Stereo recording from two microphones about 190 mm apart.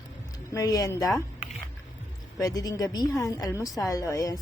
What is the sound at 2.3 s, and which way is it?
A woman's voice, 20° left (ahead or behind).